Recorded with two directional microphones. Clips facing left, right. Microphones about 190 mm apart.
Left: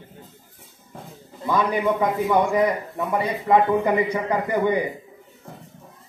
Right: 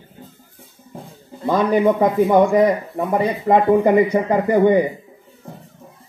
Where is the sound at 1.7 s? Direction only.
40° right (ahead or behind).